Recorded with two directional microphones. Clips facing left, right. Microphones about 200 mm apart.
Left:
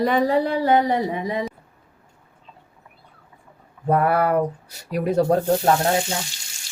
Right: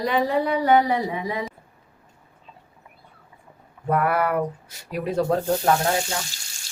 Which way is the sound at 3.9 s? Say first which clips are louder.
Left 3 dB; 30° left (ahead or behind).